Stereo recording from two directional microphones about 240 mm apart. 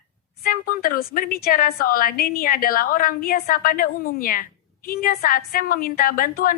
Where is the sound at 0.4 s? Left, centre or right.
Left.